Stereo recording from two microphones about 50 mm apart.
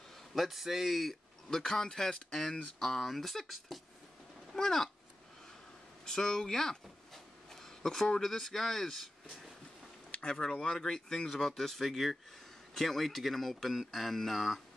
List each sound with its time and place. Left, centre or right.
0.3 s speech: centre
1.5 s speech: centre
6.0 s speech: centre
10.5 s speech: centre